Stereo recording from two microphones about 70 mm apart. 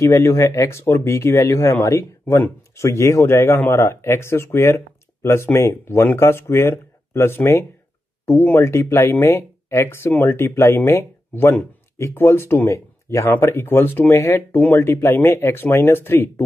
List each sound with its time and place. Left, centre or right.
0.0 s speech: left
13.3 s speech: left